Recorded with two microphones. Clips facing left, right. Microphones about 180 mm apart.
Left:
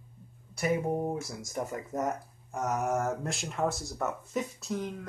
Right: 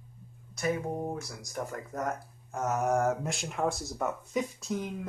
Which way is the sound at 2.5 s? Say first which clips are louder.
Even; centre (ahead or behind).